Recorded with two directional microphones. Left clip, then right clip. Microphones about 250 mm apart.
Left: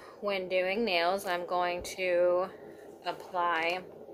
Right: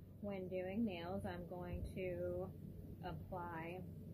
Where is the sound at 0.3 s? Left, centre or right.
Left.